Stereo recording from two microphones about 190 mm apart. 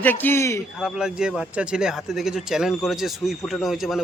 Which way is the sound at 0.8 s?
5° right (ahead or behind).